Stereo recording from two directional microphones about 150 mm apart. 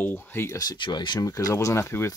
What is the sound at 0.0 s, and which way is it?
Speech, 15° left (ahead or behind).